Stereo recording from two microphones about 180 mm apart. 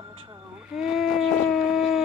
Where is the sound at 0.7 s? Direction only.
Centre (ahead or behind).